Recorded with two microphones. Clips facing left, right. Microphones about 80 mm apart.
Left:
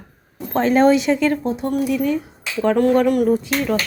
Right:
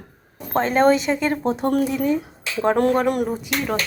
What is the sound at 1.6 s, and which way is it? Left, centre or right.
Speech, right.